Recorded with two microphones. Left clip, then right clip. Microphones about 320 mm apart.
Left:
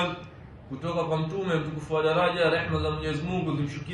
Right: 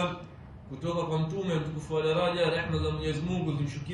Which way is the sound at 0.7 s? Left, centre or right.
Centre.